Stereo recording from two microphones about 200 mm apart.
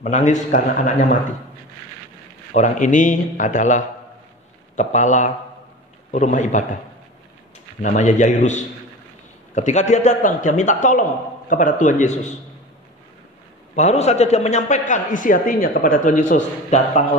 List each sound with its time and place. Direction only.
0.0 s a man's voice: 35° left (ahead or behind)
2.5 s a man's voice: 35° left (ahead or behind)
7.8 s a man's voice: 40° left (ahead or behind)
13.7 s a man's voice: 35° left (ahead or behind)